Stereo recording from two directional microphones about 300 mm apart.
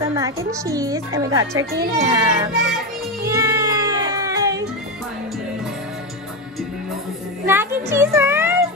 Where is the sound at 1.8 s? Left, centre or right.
Right.